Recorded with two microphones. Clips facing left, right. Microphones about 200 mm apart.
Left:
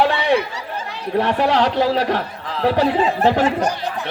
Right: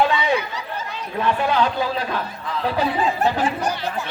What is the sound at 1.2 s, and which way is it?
A man's voice, 75° left (ahead or behind).